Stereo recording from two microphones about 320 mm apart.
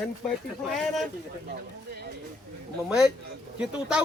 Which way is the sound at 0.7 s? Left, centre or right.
Centre.